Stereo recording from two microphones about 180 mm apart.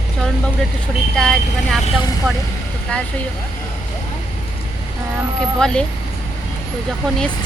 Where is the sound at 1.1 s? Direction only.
5° left (ahead or behind).